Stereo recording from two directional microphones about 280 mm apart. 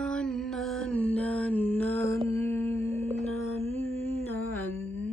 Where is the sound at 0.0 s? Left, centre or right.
Centre.